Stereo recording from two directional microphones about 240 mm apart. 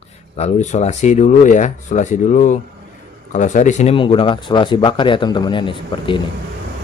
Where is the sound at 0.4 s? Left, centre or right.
Left.